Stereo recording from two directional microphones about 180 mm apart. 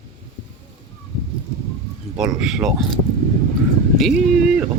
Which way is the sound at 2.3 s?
5° right (ahead or behind).